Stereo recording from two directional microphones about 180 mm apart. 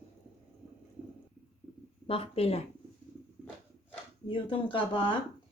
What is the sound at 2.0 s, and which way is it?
Speech, 30° left (ahead or behind).